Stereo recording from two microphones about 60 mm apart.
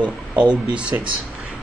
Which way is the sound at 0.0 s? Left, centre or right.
Right.